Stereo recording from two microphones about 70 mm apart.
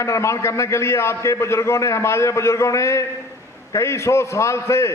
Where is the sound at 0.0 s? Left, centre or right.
Left.